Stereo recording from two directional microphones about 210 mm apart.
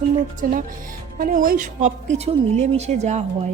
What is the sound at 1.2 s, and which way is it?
A woman's voice, 40° right (ahead or behind).